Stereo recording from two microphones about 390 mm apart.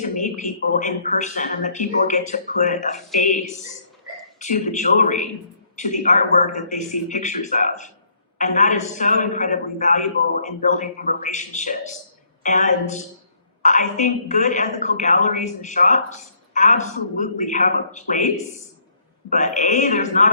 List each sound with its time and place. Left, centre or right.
0.0 s a woman's voice: centre